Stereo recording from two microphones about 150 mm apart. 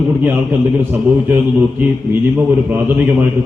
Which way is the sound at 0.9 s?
15° right (ahead or behind).